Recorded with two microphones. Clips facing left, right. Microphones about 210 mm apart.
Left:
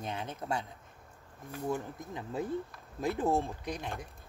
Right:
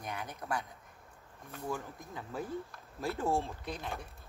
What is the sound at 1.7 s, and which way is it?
Speech, 20° left (ahead or behind).